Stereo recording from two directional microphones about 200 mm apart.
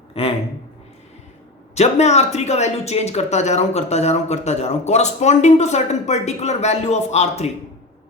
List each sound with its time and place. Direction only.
0.1 s a man's voice: 30° left (ahead or behind)
1.7 s speech: 35° left (ahead or behind)